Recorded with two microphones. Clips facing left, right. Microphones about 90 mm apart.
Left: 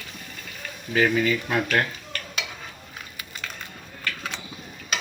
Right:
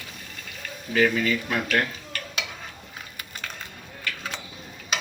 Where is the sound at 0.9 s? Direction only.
15° left (ahead or behind).